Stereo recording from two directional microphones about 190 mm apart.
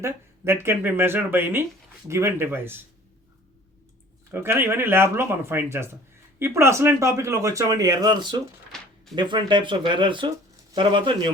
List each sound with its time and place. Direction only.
0.0 s speech: 15° right (ahead or behind)
4.3 s speech: 10° right (ahead or behind)
8.7 s a sound: 5° left (ahead or behind)
9.1 s speech: 25° right (ahead or behind)